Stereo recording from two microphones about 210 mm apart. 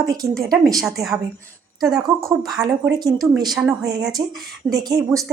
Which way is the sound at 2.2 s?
15° right (ahead or behind).